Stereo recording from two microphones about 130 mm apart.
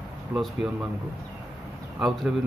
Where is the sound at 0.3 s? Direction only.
20° right (ahead or behind).